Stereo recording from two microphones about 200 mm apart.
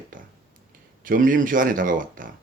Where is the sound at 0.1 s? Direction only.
45° right (ahead or behind).